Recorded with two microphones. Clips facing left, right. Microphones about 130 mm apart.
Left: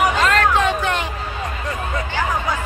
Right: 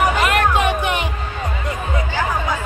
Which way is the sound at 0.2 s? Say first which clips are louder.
Even; 15° right (ahead or behind).